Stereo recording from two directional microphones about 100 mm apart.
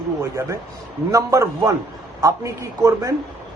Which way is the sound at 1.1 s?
30° right (ahead or behind).